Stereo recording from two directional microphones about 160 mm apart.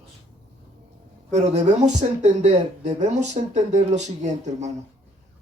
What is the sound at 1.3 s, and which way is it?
Speech, 45° right (ahead or behind).